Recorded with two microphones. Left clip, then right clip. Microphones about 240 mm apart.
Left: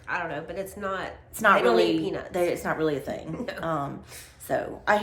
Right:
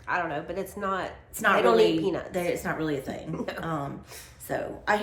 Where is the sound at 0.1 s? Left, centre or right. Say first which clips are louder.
Right 2 dB; centre.